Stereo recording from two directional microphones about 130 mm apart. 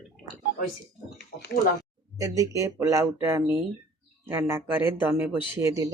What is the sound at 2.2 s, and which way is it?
Speech, 25° right (ahead or behind).